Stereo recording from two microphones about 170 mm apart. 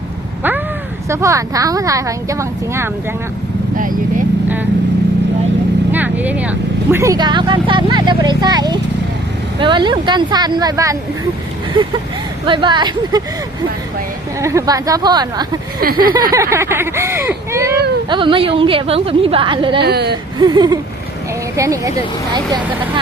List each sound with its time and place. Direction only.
1.1 s speech: 20° right (ahead or behind)
5.9 s speech: 10° right (ahead or behind)
12.5 s speech: 30° right (ahead or behind)
14.4 s speech: 20° right (ahead or behind)
15.8 s a sound: 60° right (ahead or behind)
16.3 s speech: 15° right (ahead or behind)
18.1 s a woman's voice: 30° right (ahead or behind)
19.8 s speech: 75° right (ahead or behind)
20.4 s speech: 25° right (ahead or behind)